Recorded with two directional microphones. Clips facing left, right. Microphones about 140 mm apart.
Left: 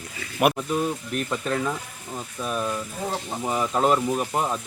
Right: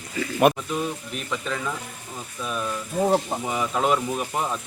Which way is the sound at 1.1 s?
45° left (ahead or behind).